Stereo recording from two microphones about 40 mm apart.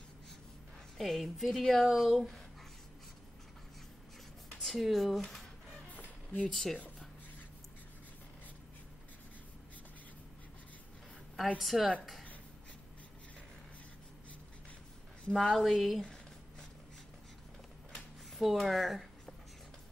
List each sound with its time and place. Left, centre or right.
0.9 s a woman's voice: centre
1.9 s speech: centre
2.1 s a woman's voice: centre
4.6 s a woman's voice: centre
5.9 s a sound: left
6.5 s speech: centre
11.6 s a woman's voice: centre
15.3 s a woman's voice: centre
18.4 s a woman's voice: centre